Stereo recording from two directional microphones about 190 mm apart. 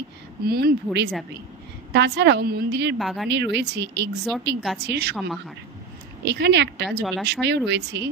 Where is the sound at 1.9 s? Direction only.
60° right (ahead or behind).